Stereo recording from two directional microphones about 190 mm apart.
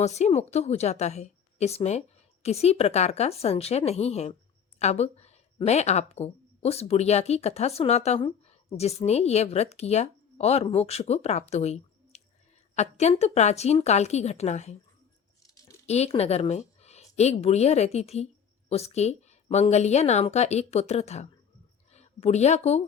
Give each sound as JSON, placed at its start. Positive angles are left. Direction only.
{"t": 0.0, "sound": "a woman's voice", "side_deg": 35}
{"t": 15.4, "sound": "a sound", "side_deg": 15}
{"t": 15.9, "sound": "a woman's voice", "side_deg": 35}